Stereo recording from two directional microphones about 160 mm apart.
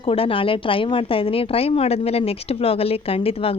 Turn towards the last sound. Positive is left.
turn(degrees=35)  # may be behind; listen again after turning